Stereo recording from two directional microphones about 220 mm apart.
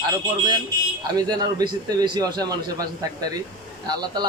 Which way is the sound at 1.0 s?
20° right (ahead or behind).